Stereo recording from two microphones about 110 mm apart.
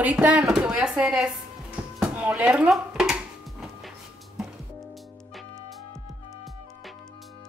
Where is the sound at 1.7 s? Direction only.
10° right (ahead or behind).